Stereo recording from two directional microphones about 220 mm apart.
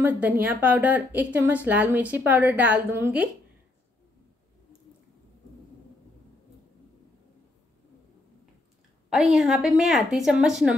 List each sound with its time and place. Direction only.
0.0 s a woman's voice: 5° right (ahead or behind)
9.1 s a woman's voice: 5° right (ahead or behind)